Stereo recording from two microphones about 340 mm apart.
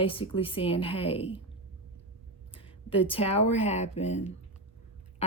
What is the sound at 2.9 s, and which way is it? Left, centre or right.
A woman's voice, centre.